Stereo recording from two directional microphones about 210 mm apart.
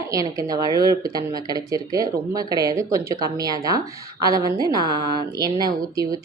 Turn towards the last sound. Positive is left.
turn(degrees=-20)  # may be behind; listen again after turning